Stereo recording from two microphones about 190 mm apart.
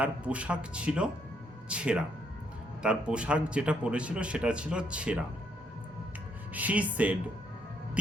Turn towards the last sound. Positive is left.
turn(degrees=-5)  # may be behind; listen again after turning